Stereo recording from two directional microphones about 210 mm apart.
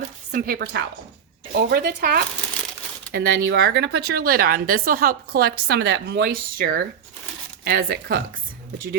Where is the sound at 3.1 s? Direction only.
60° right (ahead or behind).